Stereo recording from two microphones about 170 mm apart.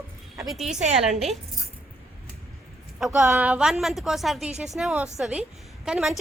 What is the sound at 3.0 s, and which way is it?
A woman's voice, 5° right (ahead or behind).